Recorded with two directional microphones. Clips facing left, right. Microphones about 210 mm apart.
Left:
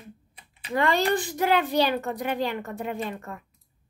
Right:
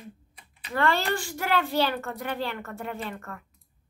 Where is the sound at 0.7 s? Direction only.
15° left (ahead or behind).